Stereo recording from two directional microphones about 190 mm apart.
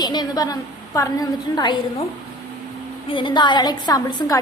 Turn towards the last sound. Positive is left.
turn(degrees=20)  # may be behind; listen again after turning